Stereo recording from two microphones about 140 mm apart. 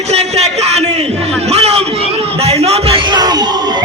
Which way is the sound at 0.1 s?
50° right (ahead or behind).